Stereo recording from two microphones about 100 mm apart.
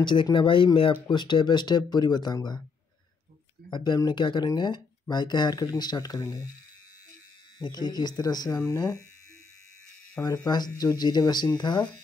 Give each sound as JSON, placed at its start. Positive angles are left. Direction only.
{"t": 0.0, "sound": "speech", "side_deg": 55}
{"t": 3.7, "sound": "speech", "side_deg": 45}
{"t": 7.5, "sound": "speech", "side_deg": 45}
{"t": 10.2, "sound": "speech", "side_deg": 35}